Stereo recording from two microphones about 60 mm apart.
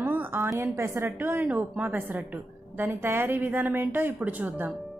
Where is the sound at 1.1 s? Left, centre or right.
Right.